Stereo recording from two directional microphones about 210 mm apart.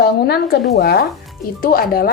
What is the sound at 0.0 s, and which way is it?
A woman's voice, 50° left (ahead or behind).